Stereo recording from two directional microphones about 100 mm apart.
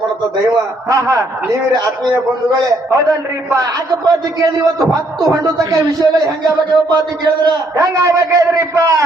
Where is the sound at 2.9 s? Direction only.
35° right (ahead or behind).